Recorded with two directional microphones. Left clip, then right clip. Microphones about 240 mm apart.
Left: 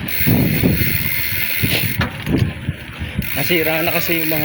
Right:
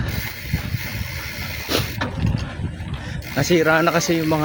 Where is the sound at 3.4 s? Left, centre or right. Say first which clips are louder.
Right 1 dB; right.